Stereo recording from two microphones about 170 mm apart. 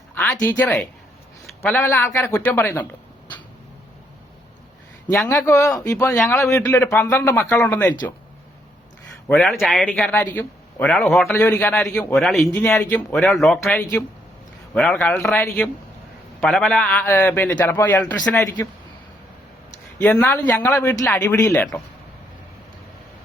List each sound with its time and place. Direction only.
0.1 s a man's voice: 10° left (ahead or behind)
5.1 s a man's voice: centre (ahead or behind)
5.4 s a man's voice: 15° left (ahead or behind)
9.2 s a man's voice: 5° left (ahead or behind)
12.8 s a man's voice: 15° left (ahead or behind)
14.9 s a man's voice: 5° left (ahead or behind)
20.0 s a man's voice: 10° left (ahead or behind)